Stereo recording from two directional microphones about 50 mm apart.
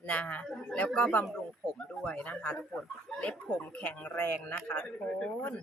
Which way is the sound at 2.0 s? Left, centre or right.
Left.